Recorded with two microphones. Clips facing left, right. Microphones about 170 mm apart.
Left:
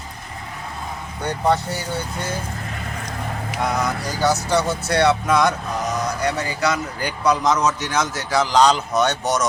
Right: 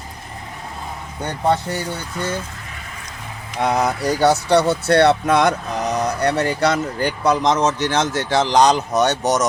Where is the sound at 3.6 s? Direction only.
65° right (ahead or behind).